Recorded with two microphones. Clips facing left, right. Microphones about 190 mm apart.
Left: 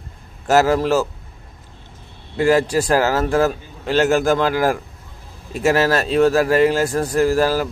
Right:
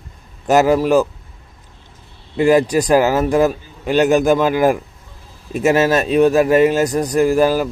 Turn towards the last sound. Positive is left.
turn(degrees=-15)  # may be behind; listen again after turning